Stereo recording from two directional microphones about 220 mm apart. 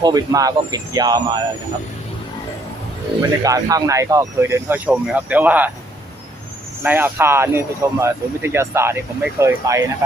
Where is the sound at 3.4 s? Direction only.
15° right (ahead or behind).